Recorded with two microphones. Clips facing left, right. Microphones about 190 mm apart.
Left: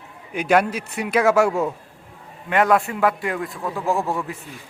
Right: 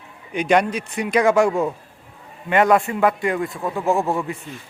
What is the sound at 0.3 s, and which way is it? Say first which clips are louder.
Speech: right 1 dB; 5° left (ahead or behind).